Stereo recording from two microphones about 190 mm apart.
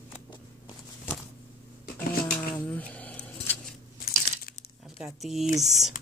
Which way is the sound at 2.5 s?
5° left (ahead or behind).